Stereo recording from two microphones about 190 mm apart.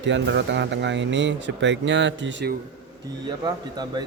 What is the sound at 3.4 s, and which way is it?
Speech, 20° right (ahead or behind).